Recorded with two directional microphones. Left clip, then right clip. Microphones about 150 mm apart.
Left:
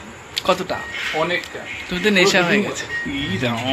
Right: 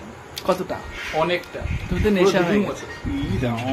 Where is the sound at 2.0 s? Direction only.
10° right (ahead or behind).